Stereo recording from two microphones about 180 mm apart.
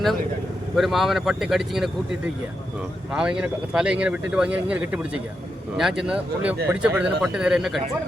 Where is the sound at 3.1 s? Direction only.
5° right (ahead or behind).